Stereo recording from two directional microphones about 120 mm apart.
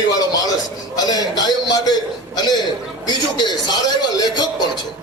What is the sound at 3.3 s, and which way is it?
A man's voice, 35° left (ahead or behind).